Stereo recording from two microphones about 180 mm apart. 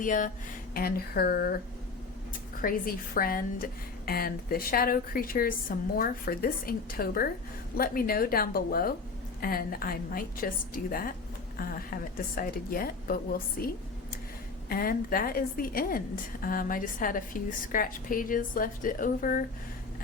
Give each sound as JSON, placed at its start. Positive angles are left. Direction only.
{"t": 0.0, "sound": "a woman's voice", "side_deg": 45}
{"t": 2.6, "sound": "a woman's voice", "side_deg": 50}